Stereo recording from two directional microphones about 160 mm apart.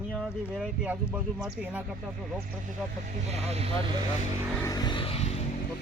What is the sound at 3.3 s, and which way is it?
Speech, 40° right (ahead or behind).